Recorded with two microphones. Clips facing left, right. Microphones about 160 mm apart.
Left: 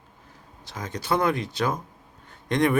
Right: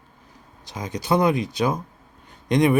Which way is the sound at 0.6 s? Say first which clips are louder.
Right 3 dB; 15° right (ahead or behind).